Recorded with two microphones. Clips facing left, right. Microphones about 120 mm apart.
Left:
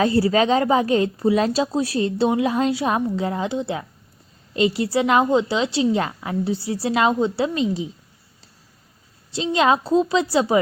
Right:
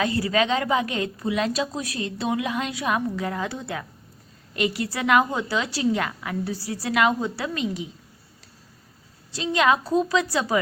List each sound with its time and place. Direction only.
0.0 s a woman's voice: 30° left (ahead or behind)
9.3 s a woman's voice: 25° left (ahead or behind)